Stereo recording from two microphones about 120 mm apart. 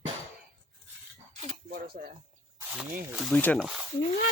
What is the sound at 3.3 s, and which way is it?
Speech, 10° left (ahead or behind).